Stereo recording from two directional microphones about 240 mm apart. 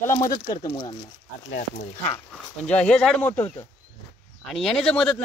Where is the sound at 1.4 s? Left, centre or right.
Left.